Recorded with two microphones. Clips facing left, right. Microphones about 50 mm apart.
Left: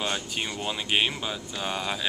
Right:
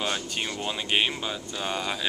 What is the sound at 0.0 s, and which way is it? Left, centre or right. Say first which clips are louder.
Speech: even; centre.